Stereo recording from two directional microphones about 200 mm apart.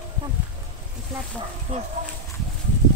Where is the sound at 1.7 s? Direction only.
35° right (ahead or behind).